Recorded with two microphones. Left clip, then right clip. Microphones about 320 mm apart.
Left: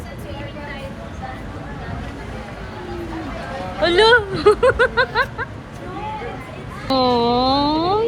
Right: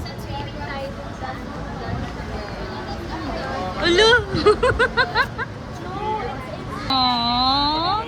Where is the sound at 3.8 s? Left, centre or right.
Centre.